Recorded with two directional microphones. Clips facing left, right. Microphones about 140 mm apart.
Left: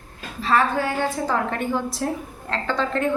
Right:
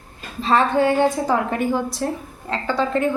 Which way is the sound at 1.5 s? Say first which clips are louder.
Right 3 dB; 5° right (ahead or behind).